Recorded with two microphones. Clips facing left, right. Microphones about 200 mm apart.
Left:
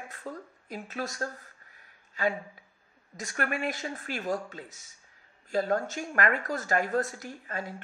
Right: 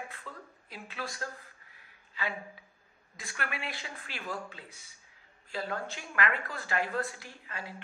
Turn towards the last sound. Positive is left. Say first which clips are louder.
# left 7 dB
turn(degrees=45)  # may be behind; listen again after turning